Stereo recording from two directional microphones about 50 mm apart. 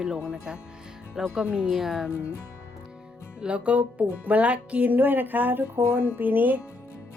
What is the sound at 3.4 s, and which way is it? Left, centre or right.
Speech, right.